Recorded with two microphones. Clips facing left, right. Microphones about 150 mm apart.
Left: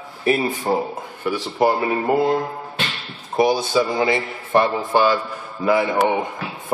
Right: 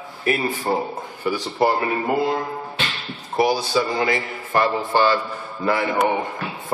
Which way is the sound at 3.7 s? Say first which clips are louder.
Left 2 dB; centre (ahead or behind).